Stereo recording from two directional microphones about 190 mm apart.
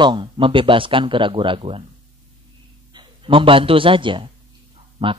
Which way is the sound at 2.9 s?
25° right (ahead or behind).